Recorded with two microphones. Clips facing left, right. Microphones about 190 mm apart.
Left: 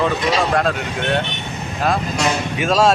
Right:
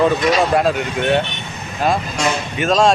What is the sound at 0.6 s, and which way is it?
Speech, 5° right (ahead or behind).